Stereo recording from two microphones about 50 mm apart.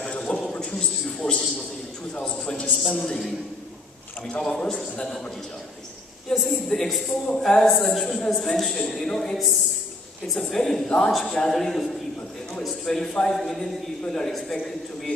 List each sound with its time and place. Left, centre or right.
0.0 s a sound: centre
2.1 s a man's voice: centre
2.7 s a woman's voice: centre
4.4 s a man's voice: centre
6.3 s a woman's voice: centre
7.3 s a man's voice: centre
7.6 s a woman's voice: centre
9.0 s a man's voice: centre